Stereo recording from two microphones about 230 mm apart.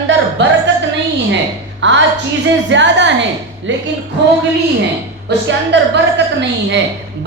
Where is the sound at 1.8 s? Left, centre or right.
Right.